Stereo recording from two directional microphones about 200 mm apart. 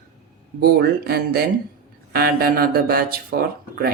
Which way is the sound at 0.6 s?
50° right (ahead or behind).